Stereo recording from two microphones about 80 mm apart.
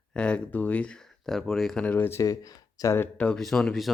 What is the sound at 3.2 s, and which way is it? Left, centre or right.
Speech, centre.